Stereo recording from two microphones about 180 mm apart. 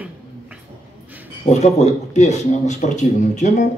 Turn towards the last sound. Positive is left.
turn(degrees=40)  # may be behind; listen again after turning